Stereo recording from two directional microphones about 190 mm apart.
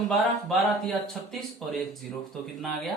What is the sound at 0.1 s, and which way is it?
Speech, centre (ahead or behind).